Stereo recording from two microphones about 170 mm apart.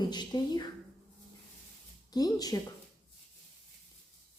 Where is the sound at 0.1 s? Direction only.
25° left (ahead or behind).